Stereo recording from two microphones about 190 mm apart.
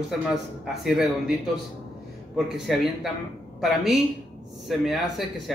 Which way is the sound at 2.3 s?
Centre (ahead or behind).